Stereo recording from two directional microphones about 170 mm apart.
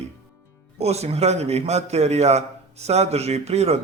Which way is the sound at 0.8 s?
40° right (ahead or behind).